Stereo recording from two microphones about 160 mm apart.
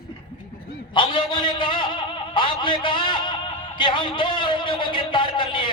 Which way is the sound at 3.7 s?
30° left (ahead or behind).